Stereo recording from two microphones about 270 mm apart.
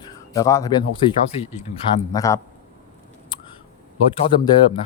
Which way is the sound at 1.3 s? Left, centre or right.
Left.